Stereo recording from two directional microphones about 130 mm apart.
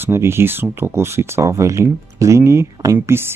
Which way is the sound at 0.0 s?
20° right (ahead or behind).